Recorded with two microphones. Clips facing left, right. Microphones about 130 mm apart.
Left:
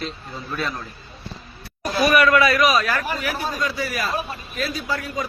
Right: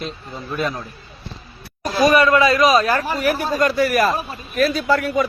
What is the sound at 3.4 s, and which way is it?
A man's voice, 55° right (ahead or behind).